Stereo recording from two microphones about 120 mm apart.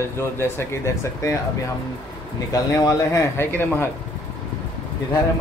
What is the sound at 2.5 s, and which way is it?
Speech, 30° left (ahead or behind).